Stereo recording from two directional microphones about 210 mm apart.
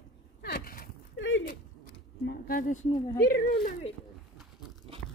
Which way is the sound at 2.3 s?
40° left (ahead or behind).